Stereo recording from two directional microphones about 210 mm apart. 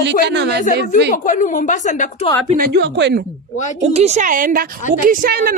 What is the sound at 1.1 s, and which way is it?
Speech, 35° left (ahead or behind).